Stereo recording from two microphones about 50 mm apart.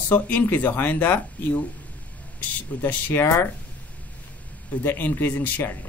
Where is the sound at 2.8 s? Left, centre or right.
Left.